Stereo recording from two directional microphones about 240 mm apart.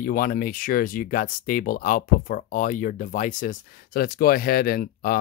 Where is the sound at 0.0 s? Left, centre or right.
Left.